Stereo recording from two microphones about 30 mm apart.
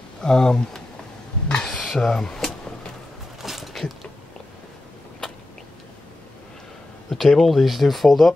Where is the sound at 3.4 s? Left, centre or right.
Centre.